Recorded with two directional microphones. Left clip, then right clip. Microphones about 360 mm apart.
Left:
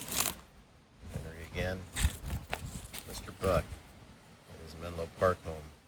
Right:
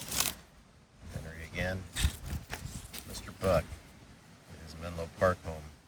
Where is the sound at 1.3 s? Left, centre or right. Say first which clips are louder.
Right 1 dB; centre.